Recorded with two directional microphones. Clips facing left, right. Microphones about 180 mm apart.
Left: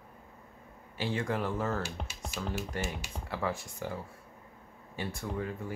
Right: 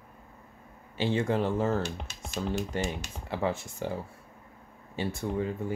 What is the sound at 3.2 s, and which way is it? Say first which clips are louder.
Speech: right 4 dB; 25° right (ahead or behind).